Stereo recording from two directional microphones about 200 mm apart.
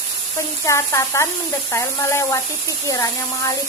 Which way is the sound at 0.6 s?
15° left (ahead or behind).